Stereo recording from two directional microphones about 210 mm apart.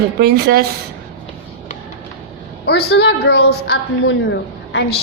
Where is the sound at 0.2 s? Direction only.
50° right (ahead or behind).